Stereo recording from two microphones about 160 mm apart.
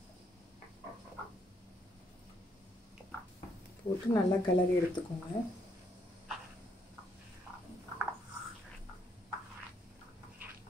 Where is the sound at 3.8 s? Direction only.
40° left (ahead or behind).